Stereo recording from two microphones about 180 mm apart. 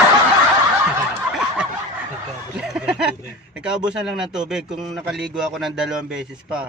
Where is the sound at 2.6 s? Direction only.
5° right (ahead or behind).